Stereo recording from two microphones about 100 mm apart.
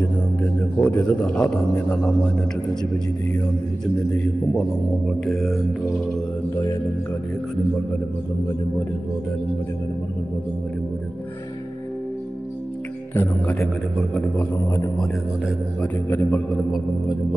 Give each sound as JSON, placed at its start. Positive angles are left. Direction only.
{"t": 0.0, "sound": "a man's voice", "side_deg": 15}
{"t": 4.6, "sound": "speech", "side_deg": 5}
{"t": 13.1, "sound": "speech", "side_deg": 20}
{"t": 15.8, "sound": "a man's voice", "side_deg": 20}